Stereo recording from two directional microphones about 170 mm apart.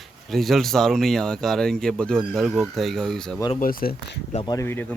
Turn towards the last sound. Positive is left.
turn(degrees=10)  # may be behind; listen again after turning